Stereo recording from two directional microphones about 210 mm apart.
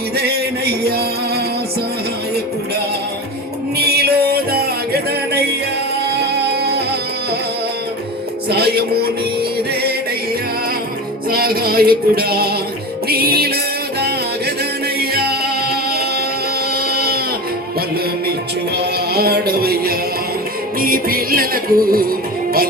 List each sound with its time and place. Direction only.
0.2 s music: 50° right (ahead or behind)
3.8 s music: 50° right (ahead or behind)
8.4 s music: 50° right (ahead or behind)
11.3 s music: 45° right (ahead or behind)
14.9 s music: 45° right (ahead or behind)
16.7 s a sound: 45° right (ahead or behind)
18.8 s music: 50° right (ahead or behind)